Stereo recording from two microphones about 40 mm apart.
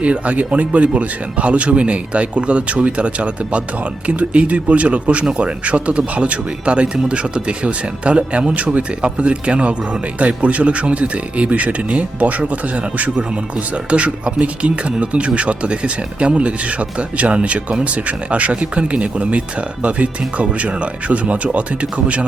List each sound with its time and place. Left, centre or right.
0.0 s speech: right
9.0 s speech: right